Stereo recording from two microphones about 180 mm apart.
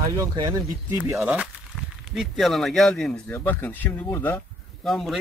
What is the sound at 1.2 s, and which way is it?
Speech, 5° right (ahead or behind).